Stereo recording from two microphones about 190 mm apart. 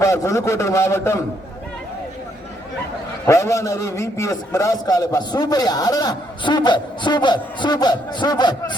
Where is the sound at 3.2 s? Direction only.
15° left (ahead or behind).